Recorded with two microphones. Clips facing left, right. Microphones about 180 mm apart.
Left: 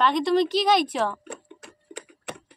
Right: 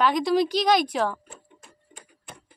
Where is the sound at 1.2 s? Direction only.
75° left (ahead or behind).